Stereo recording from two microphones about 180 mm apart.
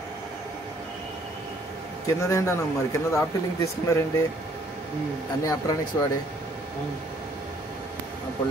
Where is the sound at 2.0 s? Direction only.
15° left (ahead or behind).